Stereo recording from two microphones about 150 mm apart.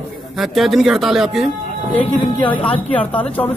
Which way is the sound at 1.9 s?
10° left (ahead or behind).